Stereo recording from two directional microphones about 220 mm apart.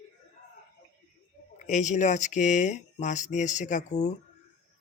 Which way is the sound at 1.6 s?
35° left (ahead or behind).